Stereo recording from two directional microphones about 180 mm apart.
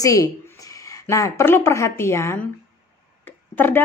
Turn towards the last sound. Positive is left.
turn(degrees=10)  # may be behind; listen again after turning